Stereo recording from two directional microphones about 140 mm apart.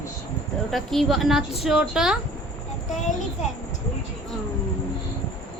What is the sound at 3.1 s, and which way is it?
Speech, 60° left (ahead or behind).